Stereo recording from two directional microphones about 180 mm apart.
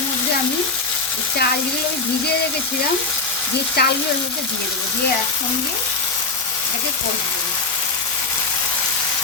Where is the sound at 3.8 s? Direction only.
60° left (ahead or behind).